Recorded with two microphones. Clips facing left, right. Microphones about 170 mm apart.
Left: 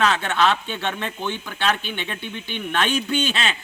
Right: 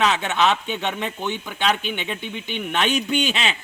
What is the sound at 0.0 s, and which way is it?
Speech, 20° right (ahead or behind).